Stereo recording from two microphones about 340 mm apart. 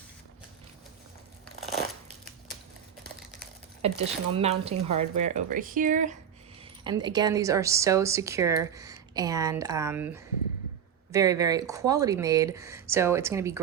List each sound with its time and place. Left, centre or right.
3.8 s a woman's voice: centre
4.7 s speech: right
5.1 s speech: centre
6.8 s a woman's voice: centre